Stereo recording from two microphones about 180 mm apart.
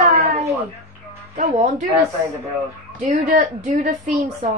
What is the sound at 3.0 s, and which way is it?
Speech, 40° right (ahead or behind).